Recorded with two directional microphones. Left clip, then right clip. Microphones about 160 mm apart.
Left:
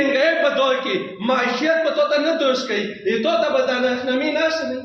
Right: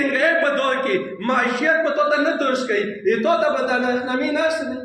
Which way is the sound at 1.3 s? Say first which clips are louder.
Even; 45° left (ahead or behind).